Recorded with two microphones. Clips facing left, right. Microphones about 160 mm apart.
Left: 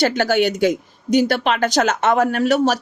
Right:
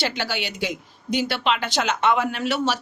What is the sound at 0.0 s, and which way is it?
Speech, 45° left (ahead or behind).